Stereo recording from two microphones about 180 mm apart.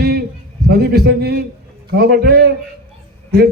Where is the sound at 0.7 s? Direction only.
65° right (ahead or behind).